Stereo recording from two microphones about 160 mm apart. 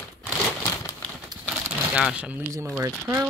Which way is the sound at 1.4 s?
10° right (ahead or behind).